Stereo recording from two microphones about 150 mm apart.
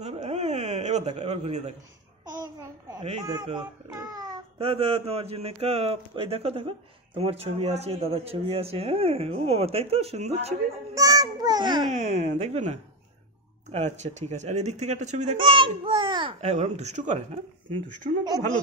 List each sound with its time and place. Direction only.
0.0 s a sound: 45° right (ahead or behind)
2.3 s babbling: 25° right (ahead or behind)
3.0 s speech: 35° right (ahead or behind)
3.9 s music: 25° right (ahead or behind)
4.6 s speech: 40° right (ahead or behind)
11.0 s a sound: 25° right (ahead or behind)
11.9 s speech: 50° right (ahead or behind)
15.3 s speech: 35° right (ahead or behind)
16.3 s speech: 50° right (ahead or behind)